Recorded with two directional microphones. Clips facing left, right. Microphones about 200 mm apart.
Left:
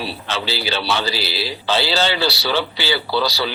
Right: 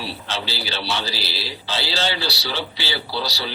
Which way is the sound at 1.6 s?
85° left.